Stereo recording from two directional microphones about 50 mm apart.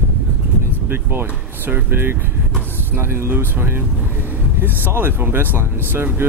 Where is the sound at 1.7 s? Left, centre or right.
Right.